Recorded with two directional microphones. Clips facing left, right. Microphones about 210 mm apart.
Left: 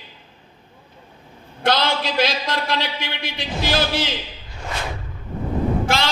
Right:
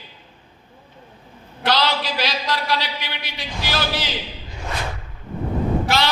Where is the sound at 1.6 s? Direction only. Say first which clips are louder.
Left 1 dB; 50° left (ahead or behind).